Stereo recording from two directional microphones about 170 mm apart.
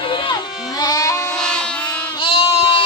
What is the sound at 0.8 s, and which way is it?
Goat, 20° left (ahead or behind).